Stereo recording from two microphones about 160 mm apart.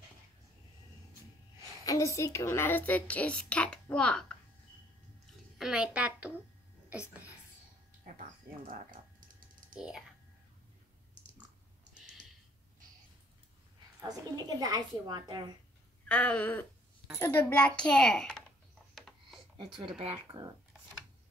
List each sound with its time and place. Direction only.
1.9 s a woman's voice: 20° left (ahead or behind); by 4.4 s 5° left (ahead or behind)
5.6 s a child's voice: 5° right (ahead or behind)
9.8 s a child's voice: 5° right (ahead or behind)
14.0 s a woman's voice: 25° right (ahead or behind)
16.1 s a woman's voice: 10° left (ahead or behind)
18.9 s a sound: 5° left (ahead or behind)
19.6 s speech: 30° right (ahead or behind)